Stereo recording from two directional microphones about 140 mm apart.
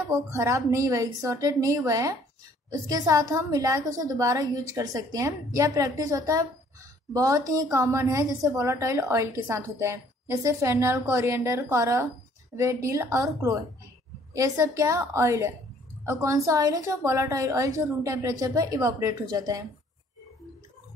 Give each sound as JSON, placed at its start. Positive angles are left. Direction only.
{"t": 0.1, "sound": "a woman's voice", "side_deg": -20}